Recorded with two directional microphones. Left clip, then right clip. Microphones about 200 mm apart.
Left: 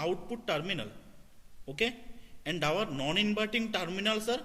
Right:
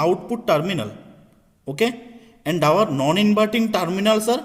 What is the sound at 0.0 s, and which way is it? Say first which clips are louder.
A man's voice: right 14 dB; 35° right (ahead or behind).